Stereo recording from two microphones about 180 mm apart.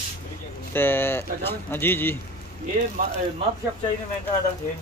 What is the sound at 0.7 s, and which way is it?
Speech, 10° left (ahead or behind).